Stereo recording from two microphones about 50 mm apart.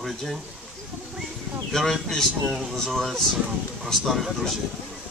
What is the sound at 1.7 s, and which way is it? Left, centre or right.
Speech, centre.